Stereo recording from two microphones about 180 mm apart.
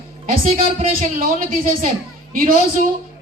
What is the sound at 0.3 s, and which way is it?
A man's voice, 50° right (ahead or behind).